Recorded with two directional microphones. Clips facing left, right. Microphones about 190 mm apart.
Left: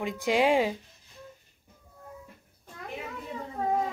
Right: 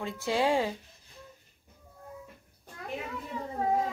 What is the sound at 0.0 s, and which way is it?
Speech, 15° left (ahead or behind).